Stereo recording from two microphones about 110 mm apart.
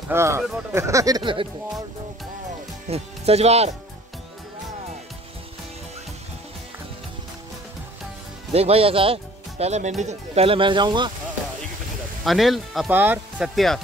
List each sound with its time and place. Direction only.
0.1 s speech: 25° right (ahead or behind)
1.2 s speech: 50° right (ahead or behind)
2.9 s speech: 70° right (ahead or behind)
8.5 s speech: 65° right (ahead or behind); by 11.1 s 45° right (ahead or behind)
12.3 s speech: centre (ahead or behind)
12.9 s speech: 15° right (ahead or behind)
13.4 s speech: centre (ahead or behind)